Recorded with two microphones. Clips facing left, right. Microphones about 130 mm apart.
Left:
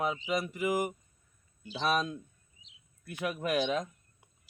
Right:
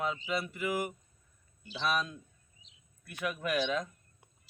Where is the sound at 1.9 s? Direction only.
25° left (ahead or behind).